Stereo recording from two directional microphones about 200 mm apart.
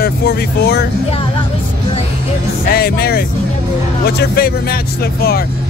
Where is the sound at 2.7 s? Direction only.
50° left (ahead or behind).